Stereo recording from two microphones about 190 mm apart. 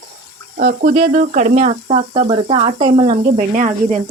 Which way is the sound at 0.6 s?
45° right (ahead or behind).